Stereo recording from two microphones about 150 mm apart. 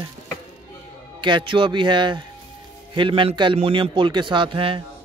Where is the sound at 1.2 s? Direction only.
35° right (ahead or behind).